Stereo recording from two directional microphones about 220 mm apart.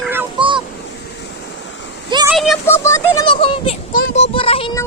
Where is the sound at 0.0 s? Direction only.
10° right (ahead or behind).